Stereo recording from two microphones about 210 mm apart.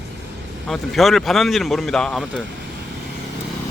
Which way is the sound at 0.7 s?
Centre (ahead or behind).